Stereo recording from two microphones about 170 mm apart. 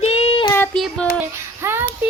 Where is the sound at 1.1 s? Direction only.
15° right (ahead or behind).